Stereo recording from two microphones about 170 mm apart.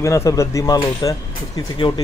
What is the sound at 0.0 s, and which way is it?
A man's voice, 20° left (ahead or behind).